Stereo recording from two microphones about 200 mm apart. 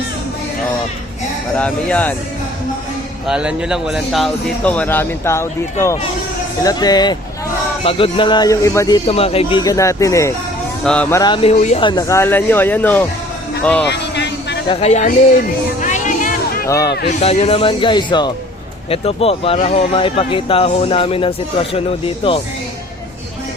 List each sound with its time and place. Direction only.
1.5 s speech: 5° left (ahead or behind)
3.2 s speech: 5° right (ahead or behind); by 5.5 s 15° left (ahead or behind)
6.6 s speech: 20° left (ahead or behind)
9.0 s speech: 30° left (ahead or behind); by 11.2 s 5° left (ahead or behind)
11.2 s speech: 25° left (ahead or behind); by 13.1 s 10° left (ahead or behind)
13.8 s a sound: 60° left (ahead or behind)
14.7 s speech: 30° left (ahead or behind)
15.8 s music: 40° left (ahead or behind)
16.6 s speech: 15° left (ahead or behind)
17.1 s speech: 35° left (ahead or behind)